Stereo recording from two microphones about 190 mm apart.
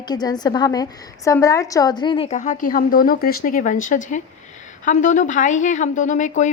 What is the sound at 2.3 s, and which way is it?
A woman's voice, 40° left (ahead or behind).